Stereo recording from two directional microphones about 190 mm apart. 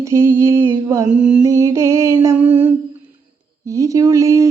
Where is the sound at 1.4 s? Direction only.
15° right (ahead or behind).